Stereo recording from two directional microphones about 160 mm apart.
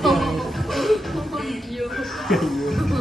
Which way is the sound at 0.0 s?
Centre (ahead or behind).